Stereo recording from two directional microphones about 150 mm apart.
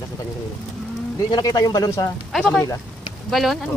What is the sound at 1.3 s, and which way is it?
Speech, 25° left (ahead or behind).